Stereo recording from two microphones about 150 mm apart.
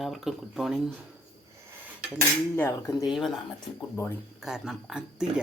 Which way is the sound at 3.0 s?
Centre (ahead or behind).